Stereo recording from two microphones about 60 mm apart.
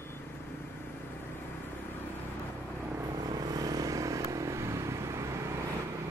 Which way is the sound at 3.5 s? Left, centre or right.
Right.